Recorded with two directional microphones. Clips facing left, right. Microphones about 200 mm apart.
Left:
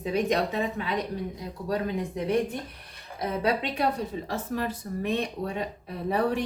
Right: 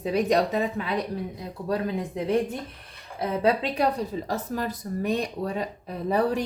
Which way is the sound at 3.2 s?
30° right (ahead or behind).